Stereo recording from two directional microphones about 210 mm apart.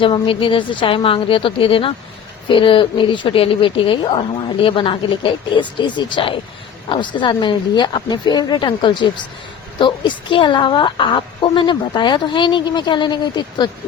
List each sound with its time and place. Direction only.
0.0 s speech: 25° left (ahead or behind)